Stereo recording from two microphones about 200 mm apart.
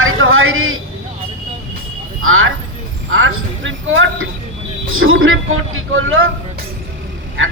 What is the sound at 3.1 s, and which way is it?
A woman's voice, 75° right (ahead or behind).